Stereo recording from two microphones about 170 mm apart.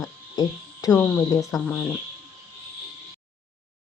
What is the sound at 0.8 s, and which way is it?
Speech, 20° left (ahead or behind).